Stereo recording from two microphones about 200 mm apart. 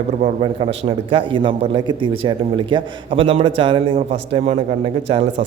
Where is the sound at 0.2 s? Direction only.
35° right (ahead or behind).